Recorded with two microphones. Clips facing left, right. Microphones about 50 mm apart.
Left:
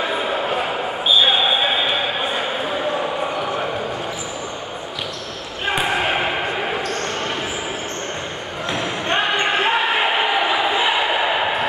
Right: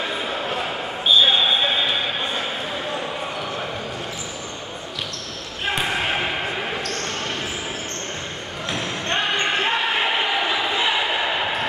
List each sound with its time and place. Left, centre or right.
0.0 s basketball bounce: centre
5.7 s basketball bounce: centre
8.6 s basketball bounce: centre